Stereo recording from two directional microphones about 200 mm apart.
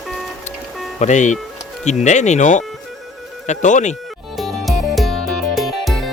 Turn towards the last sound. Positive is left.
turn(degrees=0)  # may be behind; listen again after turning